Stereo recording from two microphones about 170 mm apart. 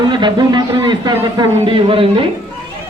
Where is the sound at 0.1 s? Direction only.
25° right (ahead or behind).